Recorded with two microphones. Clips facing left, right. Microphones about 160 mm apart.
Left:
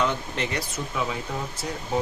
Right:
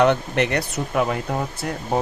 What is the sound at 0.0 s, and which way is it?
Speech, 65° right (ahead or behind).